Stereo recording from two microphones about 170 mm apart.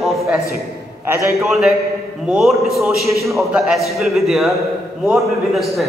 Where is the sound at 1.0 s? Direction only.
15° right (ahead or behind).